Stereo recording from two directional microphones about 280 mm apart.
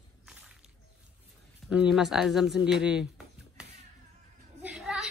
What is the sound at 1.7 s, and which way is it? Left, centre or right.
Speech, centre.